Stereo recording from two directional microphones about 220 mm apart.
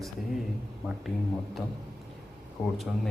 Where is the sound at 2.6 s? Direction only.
10° left (ahead or behind).